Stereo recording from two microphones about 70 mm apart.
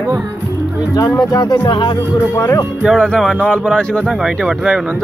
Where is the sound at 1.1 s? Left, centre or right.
Left.